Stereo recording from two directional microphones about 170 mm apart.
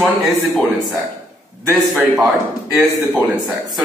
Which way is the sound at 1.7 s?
20° right (ahead or behind).